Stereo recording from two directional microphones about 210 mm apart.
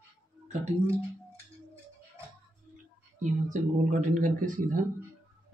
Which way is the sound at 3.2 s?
35° right (ahead or behind).